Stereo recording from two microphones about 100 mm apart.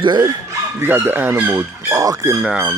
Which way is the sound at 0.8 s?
20° right (ahead or behind).